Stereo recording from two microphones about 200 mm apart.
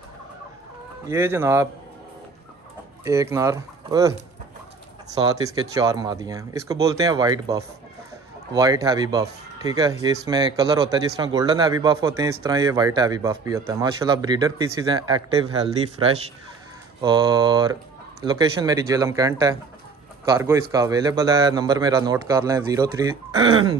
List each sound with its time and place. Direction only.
1.0 s speech: 10° right (ahead or behind)
3.0 s speech: 15° right (ahead or behind)
5.2 s a man's voice: 20° right (ahead or behind)